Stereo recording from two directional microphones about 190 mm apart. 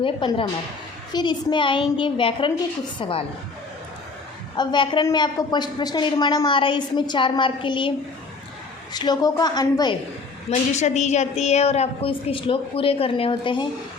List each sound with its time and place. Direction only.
0.0 s a woman's voice: 25° left (ahead or behind)
4.5 s a woman's voice: 25° left (ahead or behind)
10.5 s a woman's voice: 35° left (ahead or behind)